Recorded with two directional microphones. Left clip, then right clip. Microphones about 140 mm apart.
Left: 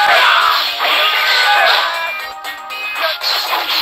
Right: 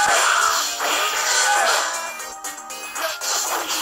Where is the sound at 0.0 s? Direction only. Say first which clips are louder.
Left 7 dB; 45° right (ahead or behind).